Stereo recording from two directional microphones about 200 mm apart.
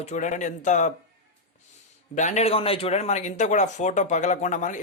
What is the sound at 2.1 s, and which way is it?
Speech, 35° left (ahead or behind).